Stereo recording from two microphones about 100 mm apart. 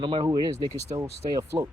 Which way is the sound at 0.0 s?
60° right (ahead or behind).